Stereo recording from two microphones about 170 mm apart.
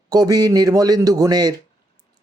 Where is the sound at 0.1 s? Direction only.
20° right (ahead or behind).